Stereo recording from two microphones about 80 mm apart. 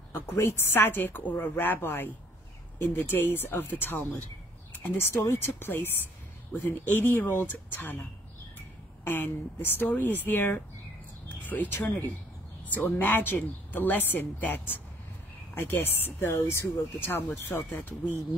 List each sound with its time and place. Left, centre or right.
0.1 s a woman's voice: left
9.0 s a woman's voice: left
11.2 s a sound: left
11.8 s a woman's voice: left